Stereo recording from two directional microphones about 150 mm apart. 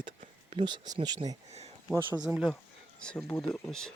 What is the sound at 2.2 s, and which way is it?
Speech, 5° right (ahead or behind).